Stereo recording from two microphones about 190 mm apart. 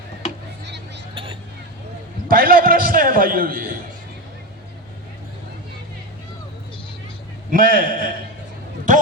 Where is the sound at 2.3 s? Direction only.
50° right (ahead or behind).